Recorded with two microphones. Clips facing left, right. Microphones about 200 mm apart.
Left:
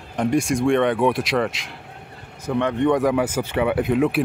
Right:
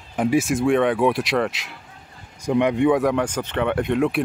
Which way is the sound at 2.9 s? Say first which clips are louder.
Even; centre (ahead or behind).